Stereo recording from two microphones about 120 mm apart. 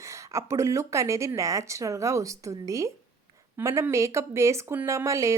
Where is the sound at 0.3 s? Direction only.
25° right (ahead or behind).